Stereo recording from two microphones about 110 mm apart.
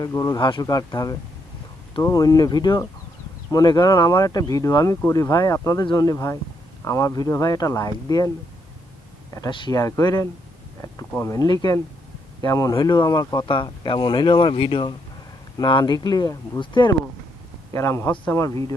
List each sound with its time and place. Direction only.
0.0 s speech: 30° left (ahead or behind)
0.3 s speech: 45° left (ahead or behind)
9.5 s speech: 50° left (ahead or behind)
17.7 s a man's voice: 25° left (ahead or behind)